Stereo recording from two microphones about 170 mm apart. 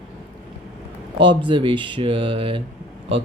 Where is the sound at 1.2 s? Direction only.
30° right (ahead or behind).